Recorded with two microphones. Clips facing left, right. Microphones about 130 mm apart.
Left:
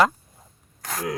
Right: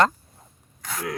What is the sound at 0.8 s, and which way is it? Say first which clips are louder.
Speech: left 2 dB; 40° left (ahead or behind).